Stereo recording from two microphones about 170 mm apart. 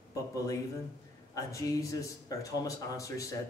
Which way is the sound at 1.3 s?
20° left (ahead or behind).